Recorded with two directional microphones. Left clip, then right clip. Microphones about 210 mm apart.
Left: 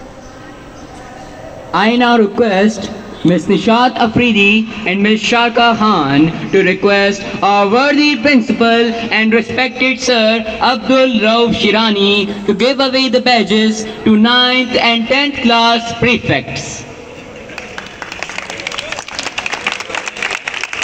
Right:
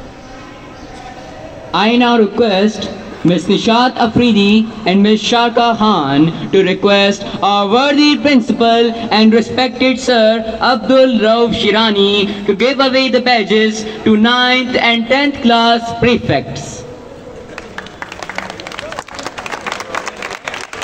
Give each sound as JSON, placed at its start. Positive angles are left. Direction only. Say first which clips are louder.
{"t": 1.7, "sound": "a man's voice", "louder": "left 1 dB", "side_deg": -5}
{"t": 3.6, "sound": "a man's voice", "louder": "left 1 dB", "side_deg": -5}
{"t": 9.1, "sound": "a man's voice", "louder": "right 2 dB", "side_deg": 15}
{"t": 9.6, "sound": "a man's voice", "louder": "even", "side_deg": 40}
{"t": 20.1, "sound": "a sound", "louder": "left 4 dB", "side_deg": -30}